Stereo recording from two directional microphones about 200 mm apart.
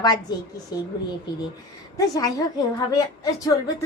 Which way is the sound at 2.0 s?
20° left (ahead or behind).